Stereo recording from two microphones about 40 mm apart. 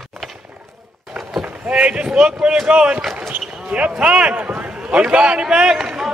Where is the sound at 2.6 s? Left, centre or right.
Right.